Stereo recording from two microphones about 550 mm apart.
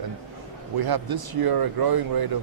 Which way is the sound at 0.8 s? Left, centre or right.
Right.